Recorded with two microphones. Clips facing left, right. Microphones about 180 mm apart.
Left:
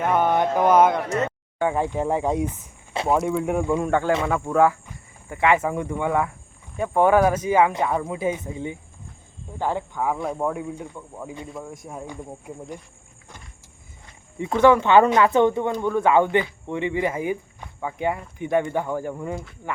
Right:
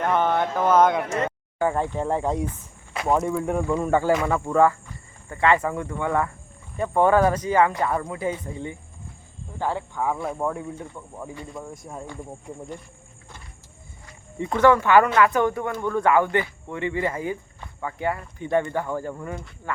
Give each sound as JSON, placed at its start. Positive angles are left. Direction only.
{"t": 0.0, "sound": "speech", "side_deg": 10}
{"t": 1.5, "sound": "speech", "side_deg": 0}
{"t": 1.8, "sound": "speech", "side_deg": 15}
{"t": 3.1, "sound": "speech", "side_deg": 5}
{"t": 3.8, "sound": "speech", "side_deg": -5}
{"t": 10.2, "sound": "speech", "side_deg": 0}
{"t": 12.0, "sound": "speech", "side_deg": 15}
{"t": 14.3, "sound": "speech", "side_deg": 10}